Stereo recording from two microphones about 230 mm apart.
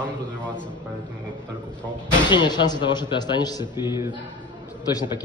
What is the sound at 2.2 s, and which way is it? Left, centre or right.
A man's voice, centre.